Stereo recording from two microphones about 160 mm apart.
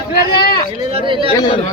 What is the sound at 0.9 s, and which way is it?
Speech, 35° right (ahead or behind).